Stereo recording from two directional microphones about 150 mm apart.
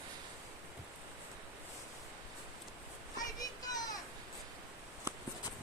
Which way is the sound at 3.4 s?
25° left (ahead or behind).